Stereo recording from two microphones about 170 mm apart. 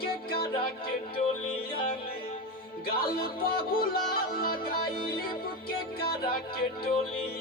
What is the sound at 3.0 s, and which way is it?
Music, 60° left (ahead or behind).